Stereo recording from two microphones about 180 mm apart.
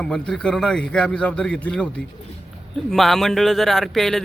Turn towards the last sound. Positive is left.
turn(degrees=0)  # may be behind; listen again after turning